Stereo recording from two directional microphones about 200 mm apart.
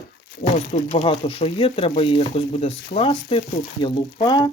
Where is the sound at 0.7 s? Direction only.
30° left (ahead or behind).